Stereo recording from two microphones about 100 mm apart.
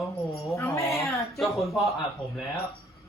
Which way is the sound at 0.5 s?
30° left (ahead or behind).